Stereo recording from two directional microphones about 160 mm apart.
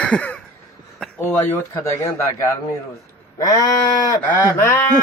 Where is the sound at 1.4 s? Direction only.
15° left (ahead or behind).